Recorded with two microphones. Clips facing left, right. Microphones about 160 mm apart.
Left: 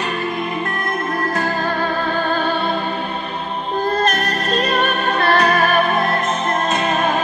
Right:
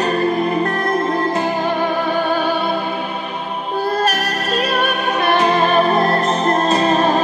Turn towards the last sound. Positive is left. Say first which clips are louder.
# right 4 dB
turn(degrees=-35)  # may be behind; listen again after turning